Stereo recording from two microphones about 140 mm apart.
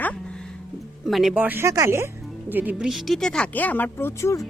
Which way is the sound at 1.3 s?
15° right (ahead or behind).